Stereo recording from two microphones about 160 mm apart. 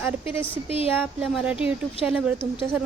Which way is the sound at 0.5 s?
35° left (ahead or behind).